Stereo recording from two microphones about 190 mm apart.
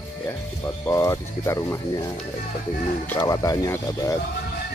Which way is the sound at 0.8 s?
15° left (ahead or behind).